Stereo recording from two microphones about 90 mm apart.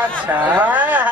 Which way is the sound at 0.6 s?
20° right (ahead or behind).